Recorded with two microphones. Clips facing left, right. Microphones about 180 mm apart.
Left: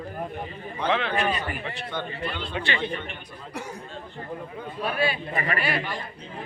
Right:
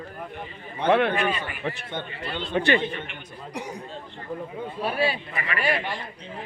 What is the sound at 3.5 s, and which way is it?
Speech, 15° right (ahead or behind).